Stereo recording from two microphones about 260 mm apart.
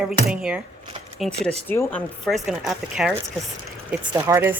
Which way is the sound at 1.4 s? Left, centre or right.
Right.